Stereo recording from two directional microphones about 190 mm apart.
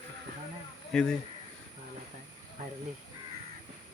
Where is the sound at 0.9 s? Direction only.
Centre (ahead or behind).